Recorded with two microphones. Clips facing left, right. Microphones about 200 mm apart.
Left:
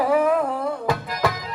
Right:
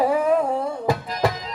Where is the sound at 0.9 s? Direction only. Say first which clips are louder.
Right 3 dB; 25° right (ahead or behind).